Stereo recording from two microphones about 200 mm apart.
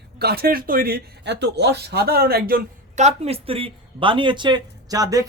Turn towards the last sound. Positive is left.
turn(degrees=-15)  # may be behind; listen again after turning